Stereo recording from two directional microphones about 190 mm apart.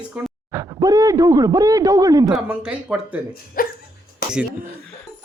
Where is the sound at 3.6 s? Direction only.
50° left (ahead or behind).